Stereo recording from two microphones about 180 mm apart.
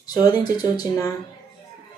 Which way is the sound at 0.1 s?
20° left (ahead or behind).